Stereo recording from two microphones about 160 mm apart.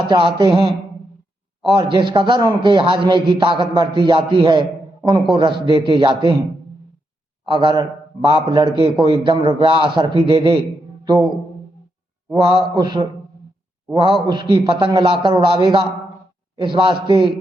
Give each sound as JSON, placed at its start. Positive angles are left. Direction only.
{"t": 0.1, "sound": "a man's voice", "side_deg": -30}
{"t": 7.4, "sound": "a man's voice", "side_deg": -30}
{"t": 11.0, "sound": "music", "side_deg": -25}
{"t": 12.3, "sound": "a man's voice", "side_deg": -30}